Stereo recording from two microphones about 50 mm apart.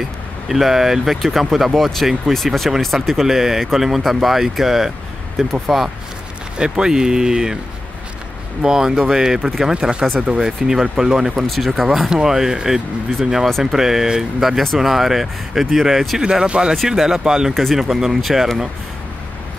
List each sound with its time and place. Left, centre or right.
0.5 s speech: centre
6.6 s speech: centre
8.6 s speech: centre
11.4 s speech: centre
13.5 s speech: centre
13.7 s speech: centre
17.6 s speech: centre